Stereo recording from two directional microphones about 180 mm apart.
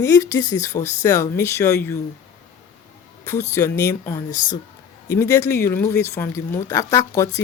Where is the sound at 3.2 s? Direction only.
15° left (ahead or behind).